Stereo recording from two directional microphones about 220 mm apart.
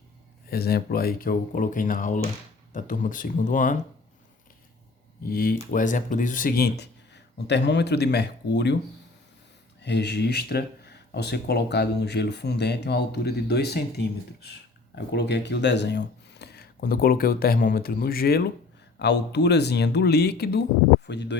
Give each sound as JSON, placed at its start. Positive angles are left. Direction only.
{"t": 0.5, "sound": "speech", "side_deg": 45}
{"t": 5.3, "sound": "speech", "side_deg": 40}
{"t": 9.8, "sound": "speech", "side_deg": 50}